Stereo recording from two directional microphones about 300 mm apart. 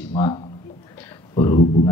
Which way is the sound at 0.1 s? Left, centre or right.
Centre.